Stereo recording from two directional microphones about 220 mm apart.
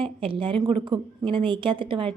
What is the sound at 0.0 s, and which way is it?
A woman's voice, 25° right (ahead or behind).